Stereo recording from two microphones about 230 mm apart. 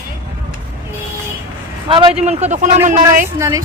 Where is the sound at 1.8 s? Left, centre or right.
Right.